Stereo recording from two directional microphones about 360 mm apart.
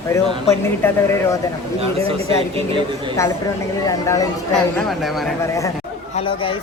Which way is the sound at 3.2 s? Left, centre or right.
Centre.